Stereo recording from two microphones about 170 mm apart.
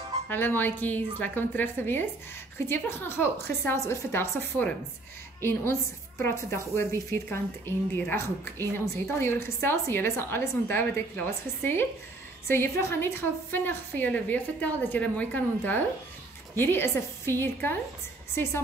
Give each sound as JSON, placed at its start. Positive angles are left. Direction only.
{"t": 0.3, "sound": "a woman's voice", "side_deg": 10}